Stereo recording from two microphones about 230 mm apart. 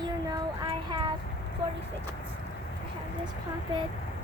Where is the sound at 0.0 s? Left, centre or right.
Centre.